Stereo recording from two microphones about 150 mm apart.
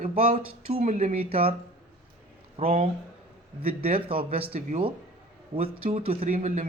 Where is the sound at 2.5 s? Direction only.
40° right (ahead or behind).